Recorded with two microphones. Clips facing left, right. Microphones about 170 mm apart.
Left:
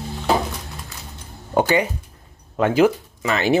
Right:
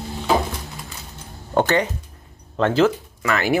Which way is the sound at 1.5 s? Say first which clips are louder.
Left 1 dB; 10° left (ahead or behind).